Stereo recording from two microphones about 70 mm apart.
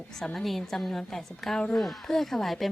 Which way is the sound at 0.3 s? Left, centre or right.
Centre.